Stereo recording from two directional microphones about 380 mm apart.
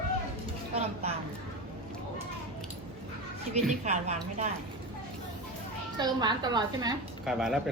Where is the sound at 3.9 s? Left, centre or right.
Centre.